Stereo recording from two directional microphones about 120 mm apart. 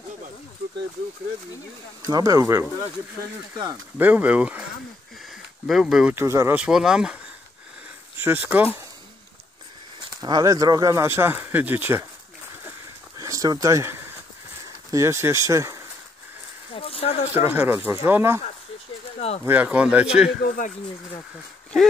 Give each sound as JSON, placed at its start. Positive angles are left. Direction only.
{"t": 2.0, "sound": "speech", "side_deg": -30}
{"t": 4.0, "sound": "speech", "side_deg": -15}
{"t": 5.3, "sound": "a sound", "side_deg": -5}
{"t": 6.1, "sound": "speech", "side_deg": -25}
{"t": 6.5, "sound": "speech", "side_deg": -5}
{"t": 8.2, "sound": "speech", "side_deg": -15}
{"t": 10.2, "sound": "speech", "side_deg": -30}
{"t": 13.2, "sound": "a sound", "side_deg": -30}
{"t": 14.9, "sound": "speech", "side_deg": -25}
{"t": 16.7, "sound": "speech", "side_deg": 55}
{"t": 17.3, "sound": "speech", "side_deg": -15}
{"t": 19.1, "sound": "speech", "side_deg": 60}
{"t": 19.4, "sound": "speech", "side_deg": -15}